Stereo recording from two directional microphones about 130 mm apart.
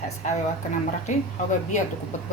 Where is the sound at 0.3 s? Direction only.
70° left (ahead or behind).